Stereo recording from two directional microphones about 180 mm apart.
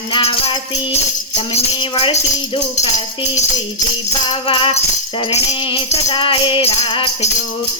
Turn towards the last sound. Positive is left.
turn(degrees=30)  # may be behind; listen again after turning